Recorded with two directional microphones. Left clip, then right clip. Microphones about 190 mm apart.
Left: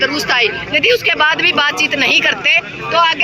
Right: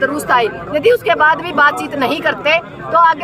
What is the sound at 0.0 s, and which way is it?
A man's voice, 15° right (ahead or behind).